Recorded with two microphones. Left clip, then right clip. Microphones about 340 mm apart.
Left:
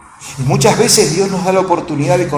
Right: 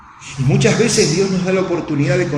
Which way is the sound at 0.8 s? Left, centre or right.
Left.